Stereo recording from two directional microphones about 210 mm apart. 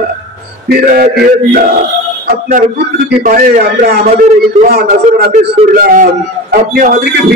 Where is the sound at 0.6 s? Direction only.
45° right (ahead or behind).